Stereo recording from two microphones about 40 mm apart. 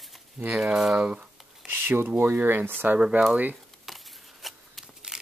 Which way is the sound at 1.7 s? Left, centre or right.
Right.